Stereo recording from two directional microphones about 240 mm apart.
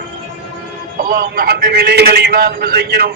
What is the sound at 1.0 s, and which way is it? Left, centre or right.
A man's voice, right.